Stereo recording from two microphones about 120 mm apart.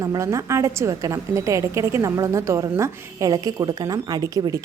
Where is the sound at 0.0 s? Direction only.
25° right (ahead or behind).